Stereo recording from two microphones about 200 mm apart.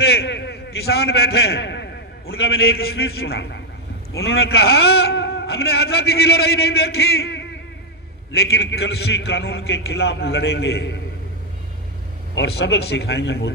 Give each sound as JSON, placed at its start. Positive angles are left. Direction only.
{"t": 0.0, "sound": "a man's voice", "side_deg": 55}
{"t": 12.4, "sound": "a man's voice", "side_deg": 55}